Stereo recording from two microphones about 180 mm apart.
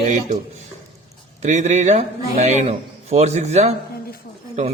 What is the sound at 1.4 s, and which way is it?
A man's voice, 40° right (ahead or behind).